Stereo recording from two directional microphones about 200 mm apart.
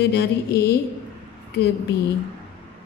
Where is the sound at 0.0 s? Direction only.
55° left (ahead or behind).